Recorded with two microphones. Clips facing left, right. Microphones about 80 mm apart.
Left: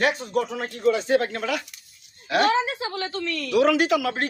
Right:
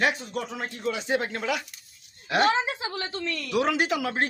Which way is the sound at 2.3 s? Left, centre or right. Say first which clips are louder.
Left 2 dB; right.